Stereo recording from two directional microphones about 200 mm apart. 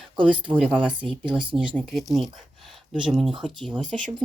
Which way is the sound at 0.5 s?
5° right (ahead or behind).